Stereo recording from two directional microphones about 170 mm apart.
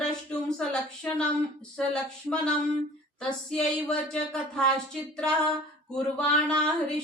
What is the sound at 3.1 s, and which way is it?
Speech, 5° left (ahead or behind).